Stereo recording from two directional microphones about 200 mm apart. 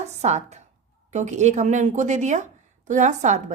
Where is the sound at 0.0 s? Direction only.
35° right (ahead or behind).